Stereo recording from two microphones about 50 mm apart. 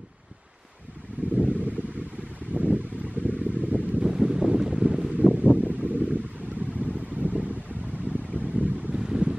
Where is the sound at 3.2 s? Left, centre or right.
Right.